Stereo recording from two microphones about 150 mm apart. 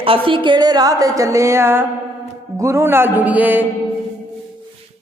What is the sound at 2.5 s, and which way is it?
Music, 20° right (ahead or behind).